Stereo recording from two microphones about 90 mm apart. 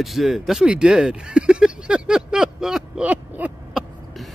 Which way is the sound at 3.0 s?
15° right (ahead or behind).